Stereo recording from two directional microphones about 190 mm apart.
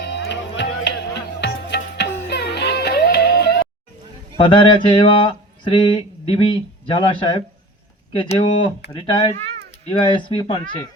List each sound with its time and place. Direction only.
0.0 s music: 65° left (ahead or behind)
4.4 s speech: 25° left (ahead or behind)